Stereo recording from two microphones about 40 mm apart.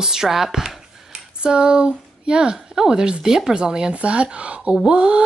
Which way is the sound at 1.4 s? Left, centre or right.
Right.